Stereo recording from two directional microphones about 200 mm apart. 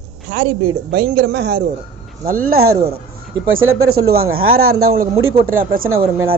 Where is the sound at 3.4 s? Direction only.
85° right.